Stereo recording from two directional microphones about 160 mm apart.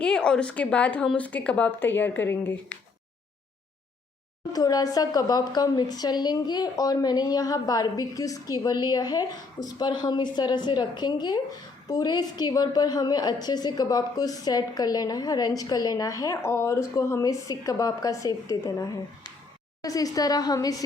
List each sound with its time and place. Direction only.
0.0 s speech: 5° left (ahead or behind)
4.5 s a woman's voice: 25° left (ahead or behind)